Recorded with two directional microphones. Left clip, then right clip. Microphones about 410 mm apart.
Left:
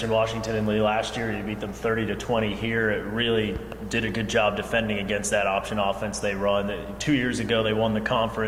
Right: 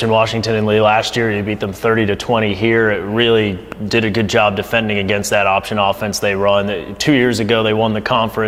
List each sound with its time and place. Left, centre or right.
0.0 s speech: right